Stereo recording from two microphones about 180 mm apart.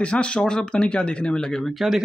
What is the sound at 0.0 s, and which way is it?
Speech, 5° left (ahead or behind).